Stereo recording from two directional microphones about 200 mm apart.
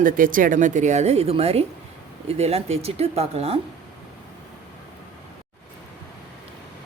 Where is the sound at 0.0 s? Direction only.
45° right (ahead or behind).